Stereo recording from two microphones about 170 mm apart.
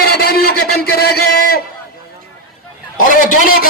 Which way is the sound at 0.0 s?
65° left (ahead or behind).